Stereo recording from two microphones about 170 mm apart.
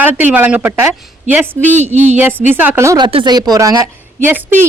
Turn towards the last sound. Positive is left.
turn(degrees=-15)  # may be behind; listen again after turning